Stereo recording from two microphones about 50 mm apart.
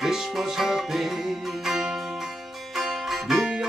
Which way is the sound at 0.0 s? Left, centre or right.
Centre.